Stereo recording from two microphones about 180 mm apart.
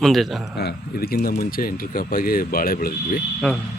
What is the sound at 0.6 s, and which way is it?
Speech, 60° left (ahead or behind).